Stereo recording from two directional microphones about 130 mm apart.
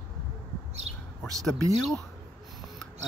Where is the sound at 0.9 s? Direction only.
50° right (ahead or behind).